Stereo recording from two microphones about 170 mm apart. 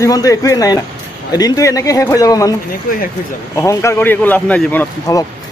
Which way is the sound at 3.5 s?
15° left (ahead or behind).